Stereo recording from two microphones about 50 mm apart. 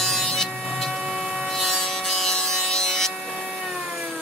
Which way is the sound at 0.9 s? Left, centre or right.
Centre.